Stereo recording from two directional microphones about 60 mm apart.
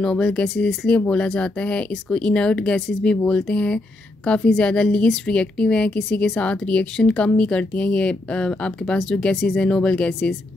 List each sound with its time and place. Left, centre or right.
0.0 s a woman's voice: centre